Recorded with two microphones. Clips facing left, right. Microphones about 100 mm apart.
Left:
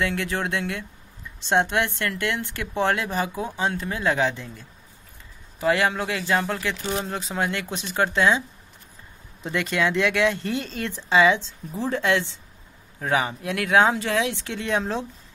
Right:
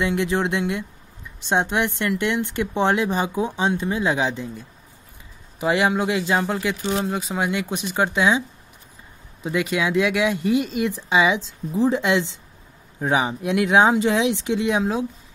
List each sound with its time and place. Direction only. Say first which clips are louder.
0.0 s a woman's voice: right 4 dB; 20° right (ahead or behind)